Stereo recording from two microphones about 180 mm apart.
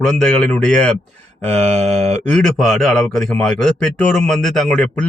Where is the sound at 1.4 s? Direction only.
40° right (ahead or behind).